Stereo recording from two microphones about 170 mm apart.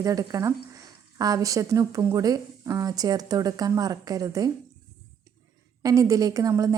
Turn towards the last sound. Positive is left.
turn(degrees=-20)  # may be behind; listen again after turning